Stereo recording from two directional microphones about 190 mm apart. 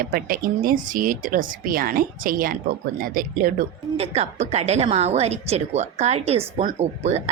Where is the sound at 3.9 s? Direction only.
35° right (ahead or behind).